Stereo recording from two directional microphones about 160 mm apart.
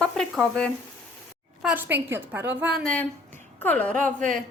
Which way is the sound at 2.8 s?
5° left (ahead or behind).